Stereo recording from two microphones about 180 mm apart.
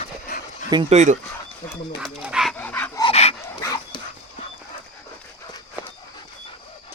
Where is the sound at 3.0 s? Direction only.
30° left (ahead or behind).